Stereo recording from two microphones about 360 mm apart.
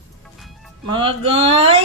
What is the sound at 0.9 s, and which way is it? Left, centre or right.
Speech, centre.